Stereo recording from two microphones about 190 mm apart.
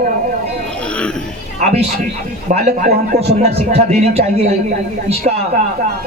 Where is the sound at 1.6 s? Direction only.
40° right (ahead or behind).